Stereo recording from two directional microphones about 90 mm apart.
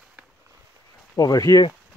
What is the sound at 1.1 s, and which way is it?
Speech, 45° left (ahead or behind).